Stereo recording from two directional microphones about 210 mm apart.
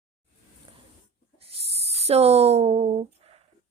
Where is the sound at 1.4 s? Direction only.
30° right (ahead or behind).